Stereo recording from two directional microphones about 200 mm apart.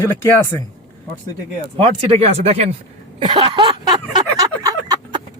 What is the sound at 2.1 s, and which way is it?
Speech, 30° right (ahead or behind).